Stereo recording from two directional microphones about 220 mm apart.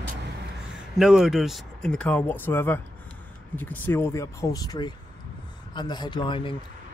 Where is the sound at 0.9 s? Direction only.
Centre (ahead or behind); by 6.5 s 20° left (ahead or behind).